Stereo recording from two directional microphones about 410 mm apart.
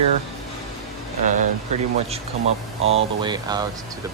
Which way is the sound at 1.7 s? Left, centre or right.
Centre.